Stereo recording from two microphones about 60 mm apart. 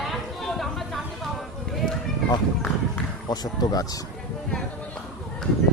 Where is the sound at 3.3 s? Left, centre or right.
Left.